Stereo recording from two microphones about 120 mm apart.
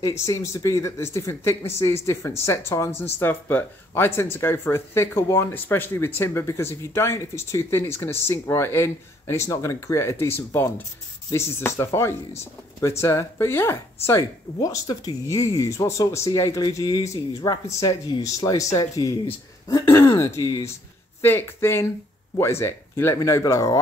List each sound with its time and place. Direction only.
0.0 s speech: 25° left (ahead or behind)